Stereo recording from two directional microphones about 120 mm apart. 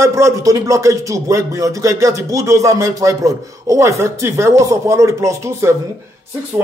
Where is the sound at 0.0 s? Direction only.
25° right (ahead or behind).